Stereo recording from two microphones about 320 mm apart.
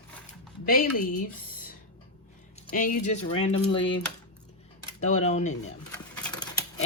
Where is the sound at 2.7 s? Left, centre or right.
Left.